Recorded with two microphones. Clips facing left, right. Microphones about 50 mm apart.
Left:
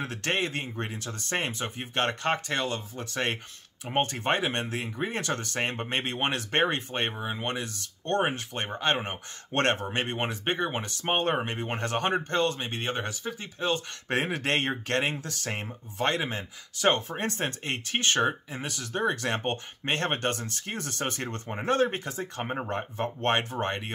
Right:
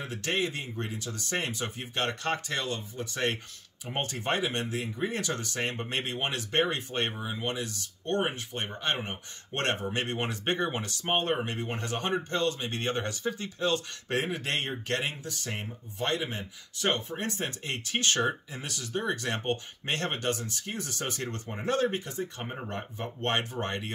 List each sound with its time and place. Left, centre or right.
0.0 s speech: left
7.4 s speech: left
8.0 s speech: left
9.8 s speech: left
11.0 s speech: left
11.3 s speech: left
11.8 s speech: left
12.6 s speech: centre
14.0 s speech: left
15.1 s speech: left
17.1 s speech: left
21.9 s speech: left
22.4 s speech: left